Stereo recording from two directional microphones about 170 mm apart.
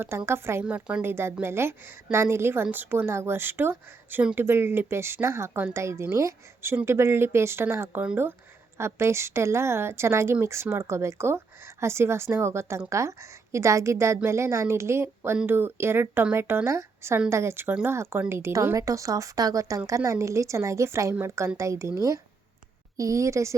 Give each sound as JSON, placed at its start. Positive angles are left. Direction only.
{"t": 0.0, "sound": "a woman's voice", "side_deg": -15}